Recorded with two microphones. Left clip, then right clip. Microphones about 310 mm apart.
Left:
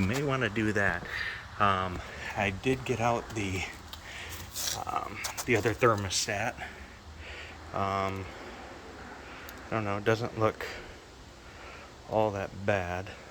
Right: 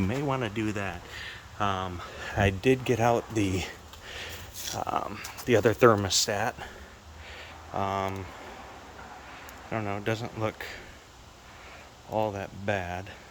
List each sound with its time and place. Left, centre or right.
0.0 s speech: centre
2.2 s a sound: right
2.6 s speech: right
4.8 s speech: right
7.7 s speech: centre
9.7 s speech: centre
12.1 s speech: centre